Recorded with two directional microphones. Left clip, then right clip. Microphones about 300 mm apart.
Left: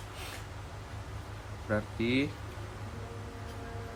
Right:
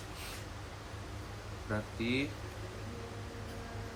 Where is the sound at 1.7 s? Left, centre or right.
Left.